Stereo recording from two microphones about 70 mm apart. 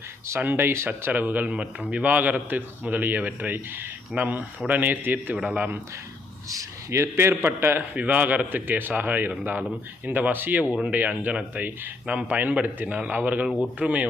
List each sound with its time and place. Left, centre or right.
0.3 s speech: right
6.5 s a man's voice: right
7.9 s speech: right